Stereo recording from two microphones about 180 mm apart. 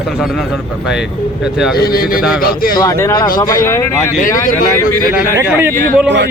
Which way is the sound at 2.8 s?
15° left (ahead or behind).